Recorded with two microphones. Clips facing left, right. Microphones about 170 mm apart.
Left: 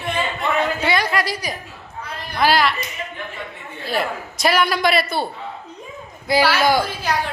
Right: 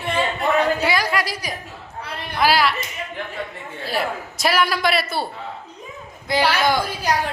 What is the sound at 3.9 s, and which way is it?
A man's voice, 5° right (ahead or behind).